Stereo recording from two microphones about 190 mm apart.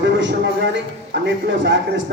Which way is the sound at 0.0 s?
70° right (ahead or behind).